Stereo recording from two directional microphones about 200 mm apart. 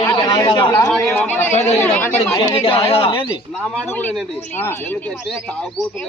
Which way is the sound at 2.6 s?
30° left (ahead or behind).